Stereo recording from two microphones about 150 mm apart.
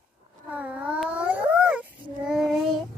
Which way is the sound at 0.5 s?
10° right (ahead or behind).